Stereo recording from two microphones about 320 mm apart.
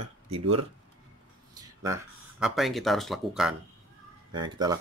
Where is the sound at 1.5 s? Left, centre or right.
Centre.